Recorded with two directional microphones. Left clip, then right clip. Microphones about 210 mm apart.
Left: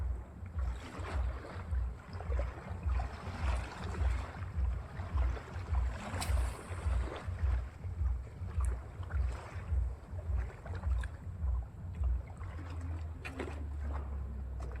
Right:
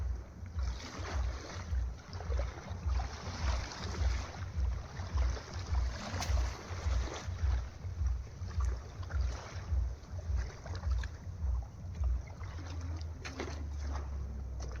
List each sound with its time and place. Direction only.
0.8 s boat: 10° right (ahead or behind)
2.0 s boat: 5° left (ahead or behind); by 7.3 s 20° right (ahead or behind)
13.2 s a sound: 10° right (ahead or behind)